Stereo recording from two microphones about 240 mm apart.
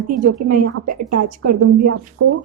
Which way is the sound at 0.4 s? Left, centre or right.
Right.